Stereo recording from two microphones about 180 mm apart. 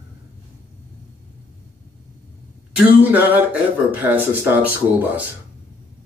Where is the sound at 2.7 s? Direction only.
10° right (ahead or behind).